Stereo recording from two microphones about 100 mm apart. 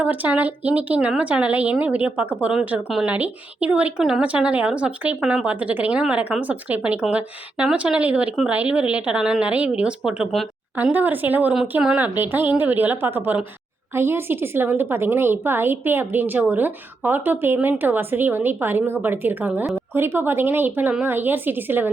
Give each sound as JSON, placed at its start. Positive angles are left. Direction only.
{"t": 0.0, "sound": "speech", "side_deg": -15}
{"t": 10.9, "sound": "a woman's voice", "side_deg": -20}